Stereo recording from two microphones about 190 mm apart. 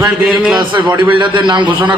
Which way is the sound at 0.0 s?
5° right (ahead or behind).